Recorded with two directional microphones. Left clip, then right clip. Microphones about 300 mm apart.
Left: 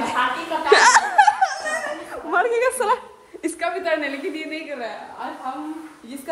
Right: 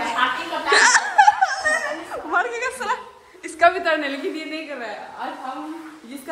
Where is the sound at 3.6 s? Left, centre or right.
Centre.